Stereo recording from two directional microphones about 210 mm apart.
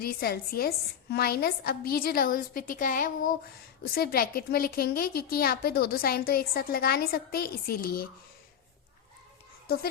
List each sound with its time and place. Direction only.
0.0 s a woman's voice: 45° left (ahead or behind)
9.6 s speech: 45° left (ahead or behind)